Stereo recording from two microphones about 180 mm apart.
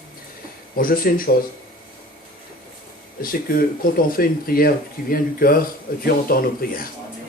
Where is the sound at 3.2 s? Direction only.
55° left (ahead or behind).